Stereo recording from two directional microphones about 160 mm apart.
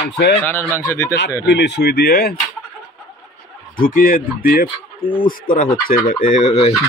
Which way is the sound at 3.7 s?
60° left (ahead or behind).